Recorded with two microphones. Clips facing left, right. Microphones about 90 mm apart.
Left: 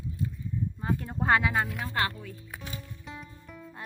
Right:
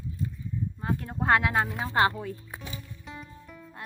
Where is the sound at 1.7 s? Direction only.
25° right (ahead or behind).